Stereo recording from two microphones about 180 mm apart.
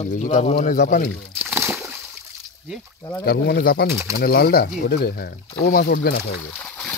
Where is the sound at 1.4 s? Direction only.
10° right (ahead or behind).